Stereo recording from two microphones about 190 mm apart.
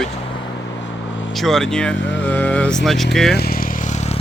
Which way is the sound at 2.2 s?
10° left (ahead or behind).